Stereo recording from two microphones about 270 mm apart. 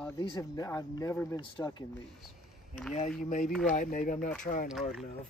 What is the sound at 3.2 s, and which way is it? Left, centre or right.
Speech, left.